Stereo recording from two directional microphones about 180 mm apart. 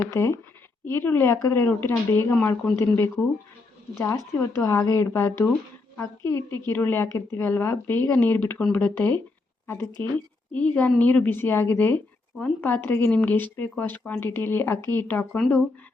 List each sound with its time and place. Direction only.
0.0 s a woman's voice: 15° left (ahead or behind)